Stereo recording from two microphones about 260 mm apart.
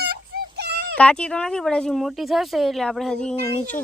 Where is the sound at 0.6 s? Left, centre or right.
Right.